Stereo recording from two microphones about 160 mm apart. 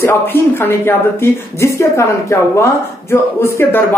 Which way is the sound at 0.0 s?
15° left (ahead or behind).